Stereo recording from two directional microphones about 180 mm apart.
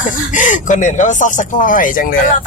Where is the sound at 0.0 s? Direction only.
45° left (ahead or behind).